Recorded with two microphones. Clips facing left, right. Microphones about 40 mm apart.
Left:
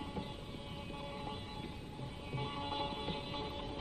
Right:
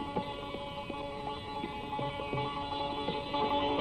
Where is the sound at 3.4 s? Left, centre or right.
Right.